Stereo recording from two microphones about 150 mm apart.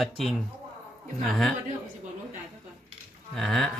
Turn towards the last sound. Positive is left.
turn(degrees=0)  # may be behind; listen again after turning